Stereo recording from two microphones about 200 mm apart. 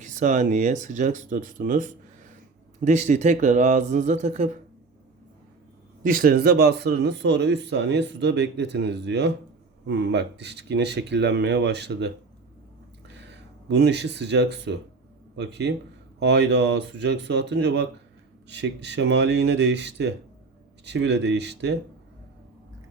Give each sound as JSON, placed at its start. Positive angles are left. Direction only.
{"t": 0.0, "sound": "speech", "side_deg": -40}
{"t": 6.0, "sound": "speech", "side_deg": -45}
{"t": 13.1, "sound": "speech", "side_deg": -60}